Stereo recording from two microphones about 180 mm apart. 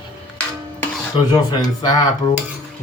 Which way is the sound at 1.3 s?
20° left (ahead or behind).